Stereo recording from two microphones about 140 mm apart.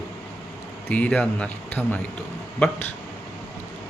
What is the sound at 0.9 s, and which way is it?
A man's voice, 10° left (ahead or behind).